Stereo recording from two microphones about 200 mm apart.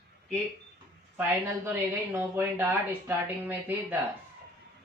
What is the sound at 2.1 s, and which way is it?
Speech, 10° right (ahead or behind).